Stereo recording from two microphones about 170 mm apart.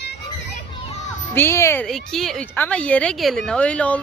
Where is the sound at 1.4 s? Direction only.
15° left (ahead or behind).